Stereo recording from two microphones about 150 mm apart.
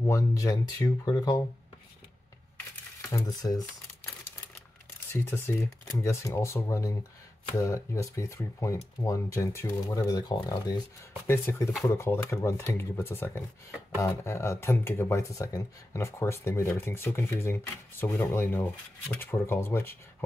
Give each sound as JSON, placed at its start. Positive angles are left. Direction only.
{"t": 0.0, "sound": "speech", "side_deg": 20}
{"t": 3.0, "sound": "speech", "side_deg": 20}
{"t": 5.1, "sound": "speech", "side_deg": 20}
{"t": 11.2, "sound": "speech", "side_deg": 15}